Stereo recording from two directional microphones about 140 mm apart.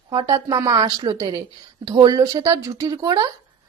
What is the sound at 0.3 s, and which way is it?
A woman's voice, 25° right (ahead or behind).